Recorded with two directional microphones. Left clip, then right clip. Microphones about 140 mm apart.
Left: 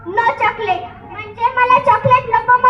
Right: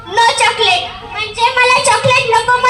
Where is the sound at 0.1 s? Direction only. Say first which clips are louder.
Right 5 dB; 40° right (ahead or behind).